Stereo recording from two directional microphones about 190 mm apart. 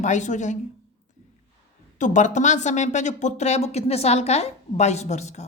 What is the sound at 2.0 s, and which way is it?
Speech, 40° left (ahead or behind).